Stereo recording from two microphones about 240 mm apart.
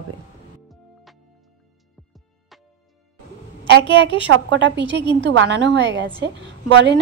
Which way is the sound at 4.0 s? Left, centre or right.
Left.